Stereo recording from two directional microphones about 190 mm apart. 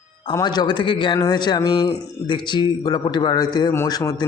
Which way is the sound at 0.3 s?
20° left (ahead or behind).